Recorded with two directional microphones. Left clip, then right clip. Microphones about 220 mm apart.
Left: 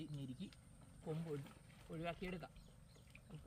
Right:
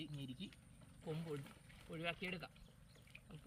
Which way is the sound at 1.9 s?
Centre (ahead or behind).